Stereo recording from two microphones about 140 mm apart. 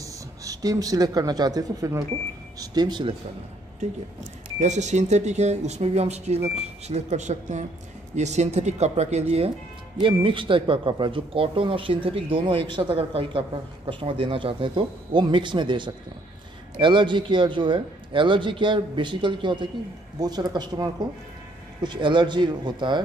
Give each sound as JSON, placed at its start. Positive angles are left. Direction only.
{"t": 0.0, "sound": "speech", "side_deg": -25}
{"t": 4.6, "sound": "speech", "side_deg": -55}
{"t": 9.9, "sound": "speech", "side_deg": -35}